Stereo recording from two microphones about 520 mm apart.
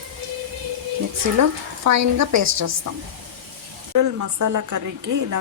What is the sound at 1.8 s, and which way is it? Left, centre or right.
Speech, right.